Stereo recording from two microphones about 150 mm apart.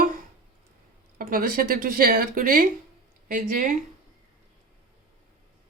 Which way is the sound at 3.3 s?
60° right (ahead or behind).